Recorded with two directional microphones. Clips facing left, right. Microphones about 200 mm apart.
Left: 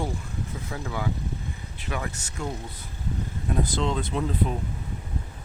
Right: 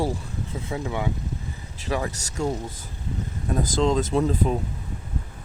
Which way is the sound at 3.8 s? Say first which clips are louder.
Right 6 dB; 40° right (ahead or behind).